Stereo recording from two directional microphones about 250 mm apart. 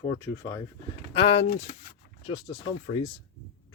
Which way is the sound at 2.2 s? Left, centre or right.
Centre.